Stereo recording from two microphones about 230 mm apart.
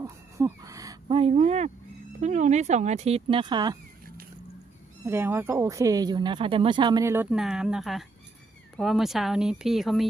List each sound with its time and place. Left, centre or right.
0.0 s speech: centre
5.0 s a woman's voice: centre